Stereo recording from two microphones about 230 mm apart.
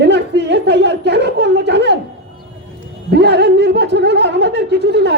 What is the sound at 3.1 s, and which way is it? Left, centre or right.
A man's voice, right.